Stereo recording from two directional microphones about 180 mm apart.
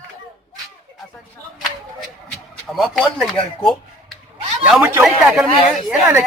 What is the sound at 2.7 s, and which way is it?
Speech, centre (ahead or behind).